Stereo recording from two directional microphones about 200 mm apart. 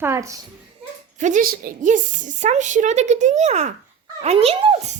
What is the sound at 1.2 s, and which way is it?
A woman's voice, 40° right (ahead or behind).